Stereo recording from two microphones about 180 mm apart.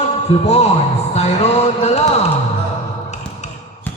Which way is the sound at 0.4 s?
35° left (ahead or behind).